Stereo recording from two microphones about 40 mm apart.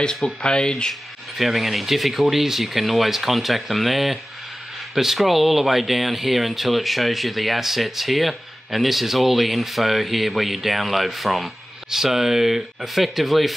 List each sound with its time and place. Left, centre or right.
0.0 s speech: centre
1.4 s speech: centre